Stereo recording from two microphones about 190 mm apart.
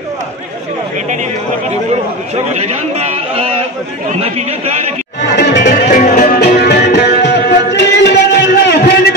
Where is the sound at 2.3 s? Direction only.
35° right (ahead or behind).